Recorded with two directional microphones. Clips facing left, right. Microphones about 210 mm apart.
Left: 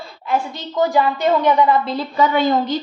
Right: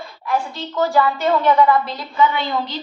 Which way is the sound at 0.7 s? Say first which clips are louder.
Left 1 dB; 20° left (ahead or behind).